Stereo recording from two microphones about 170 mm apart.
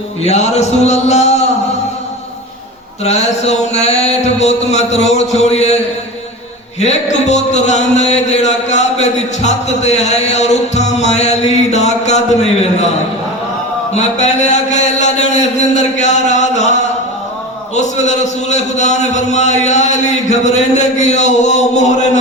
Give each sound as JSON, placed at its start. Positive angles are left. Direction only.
{"t": 0.2, "sound": "speech", "side_deg": 40}
{"t": 3.0, "sound": "speech", "side_deg": 40}
{"t": 13.9, "sound": "a man's voice", "side_deg": 40}
{"t": 17.7, "sound": "a man's voice", "side_deg": 45}